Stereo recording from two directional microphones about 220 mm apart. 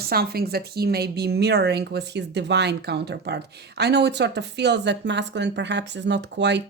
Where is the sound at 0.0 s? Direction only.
45° right (ahead or behind).